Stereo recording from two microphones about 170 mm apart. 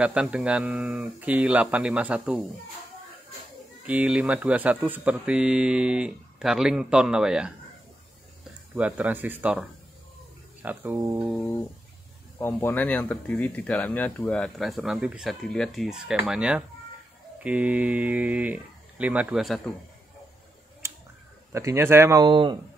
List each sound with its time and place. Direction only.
0.0 s speech: 5° right (ahead or behind)
3.8 s speech: 10° right (ahead or behind)
8.7 s speech: 10° right (ahead or behind)
11.3 s guitar: 15° left (ahead or behind)
12.4 s speech: 10° left (ahead or behind)
20.8 s a sound: 15° right (ahead or behind)
21.5 s speech: 15° right (ahead or behind)
22.2 s speech: 25° right (ahead or behind)